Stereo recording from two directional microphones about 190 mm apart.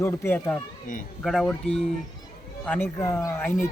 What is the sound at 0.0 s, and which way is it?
Speech, 15° left (ahead or behind).